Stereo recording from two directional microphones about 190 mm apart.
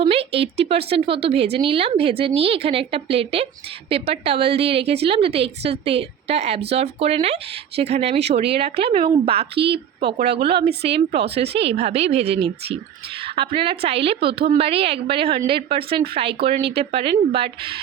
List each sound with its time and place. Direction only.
0.0 s a woman's voice: 30° right (ahead or behind)
9.6 s a woman's voice: 60° right (ahead or behind)
10.6 s a woman's voice: 30° right (ahead or behind)